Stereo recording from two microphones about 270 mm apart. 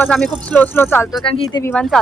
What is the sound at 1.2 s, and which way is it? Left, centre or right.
Speech, centre.